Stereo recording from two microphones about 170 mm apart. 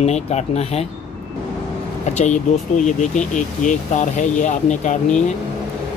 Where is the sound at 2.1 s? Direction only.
45° left (ahead or behind).